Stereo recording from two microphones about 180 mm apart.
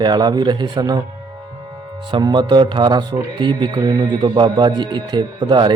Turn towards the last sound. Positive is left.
turn(degrees=-25)  # may be behind; listen again after turning